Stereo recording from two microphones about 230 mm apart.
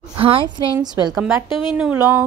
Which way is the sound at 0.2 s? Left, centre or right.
Right.